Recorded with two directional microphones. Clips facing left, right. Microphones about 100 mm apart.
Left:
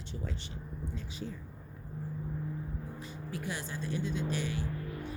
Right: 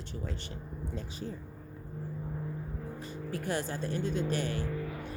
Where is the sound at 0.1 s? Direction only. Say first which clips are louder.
Right 1 dB; 50° right (ahead or behind).